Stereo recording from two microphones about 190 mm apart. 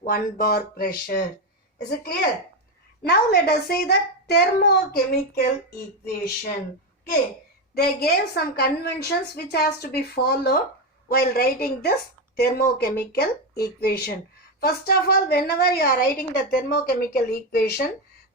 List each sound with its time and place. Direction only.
0.0 s a woman's voice: 50° left (ahead or behind)
7.8 s a woman's voice: 55° left (ahead or behind)